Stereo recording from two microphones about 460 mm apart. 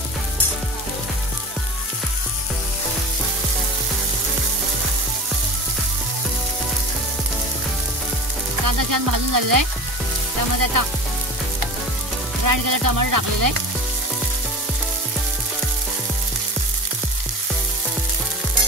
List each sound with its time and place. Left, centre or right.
8.6 s sizzle: right
12.4 s sizzle: right